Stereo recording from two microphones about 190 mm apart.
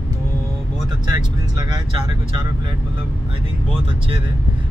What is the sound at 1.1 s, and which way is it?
Vehicle, 20° right (ahead or behind).